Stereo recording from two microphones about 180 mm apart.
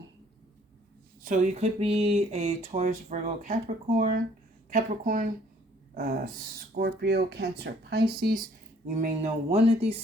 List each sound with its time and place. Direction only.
1.2 s speech: 40° right (ahead or behind); by 8.4 s 55° right (ahead or behind)
9.2 s speech: 35° right (ahead or behind)